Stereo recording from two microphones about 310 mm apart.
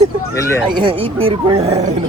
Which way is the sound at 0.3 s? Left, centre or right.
Centre.